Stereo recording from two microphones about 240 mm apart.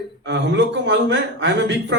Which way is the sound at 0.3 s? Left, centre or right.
Right.